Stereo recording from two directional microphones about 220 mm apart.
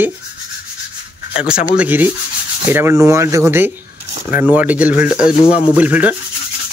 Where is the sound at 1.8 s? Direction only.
10° right (ahead or behind).